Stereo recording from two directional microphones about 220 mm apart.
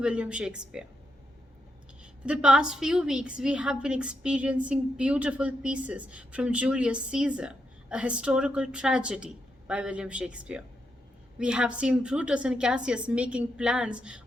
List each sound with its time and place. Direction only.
0.0 s a woman's voice: 5° right (ahead or behind)
2.2 s a woman's voice: 5° right (ahead or behind)